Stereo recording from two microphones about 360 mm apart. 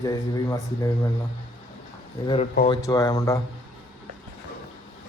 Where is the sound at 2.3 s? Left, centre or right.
Centre.